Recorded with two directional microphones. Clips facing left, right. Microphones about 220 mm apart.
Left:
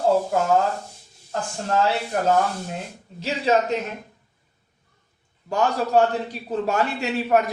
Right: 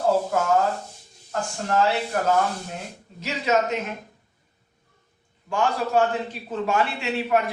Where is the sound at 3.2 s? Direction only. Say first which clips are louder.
Left 2 dB; 30° left (ahead or behind).